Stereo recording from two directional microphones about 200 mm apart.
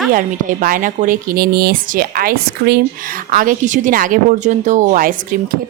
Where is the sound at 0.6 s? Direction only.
45° right (ahead or behind).